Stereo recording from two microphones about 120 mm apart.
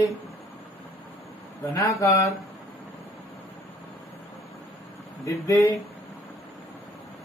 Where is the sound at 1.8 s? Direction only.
25° left (ahead or behind).